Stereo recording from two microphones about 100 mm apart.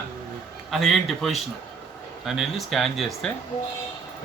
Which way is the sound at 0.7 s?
Centre (ahead or behind).